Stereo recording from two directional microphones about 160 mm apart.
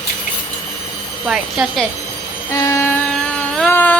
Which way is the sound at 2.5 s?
20° left (ahead or behind).